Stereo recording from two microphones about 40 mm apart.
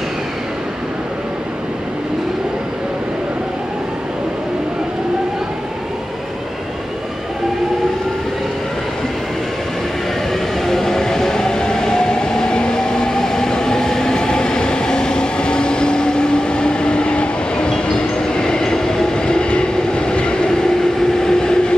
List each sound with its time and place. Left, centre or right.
10.6 s train: centre